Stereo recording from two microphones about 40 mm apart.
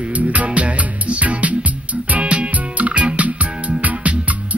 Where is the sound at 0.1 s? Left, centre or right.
Right.